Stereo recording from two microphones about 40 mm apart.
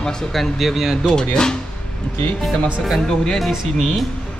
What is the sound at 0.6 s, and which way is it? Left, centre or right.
Speech, centre.